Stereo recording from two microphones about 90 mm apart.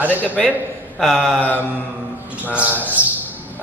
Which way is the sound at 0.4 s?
5° left (ahead or behind).